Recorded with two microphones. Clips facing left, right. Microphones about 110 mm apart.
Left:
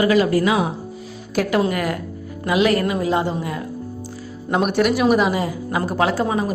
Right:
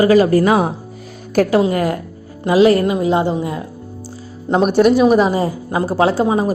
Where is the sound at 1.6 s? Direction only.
25° right (ahead or behind).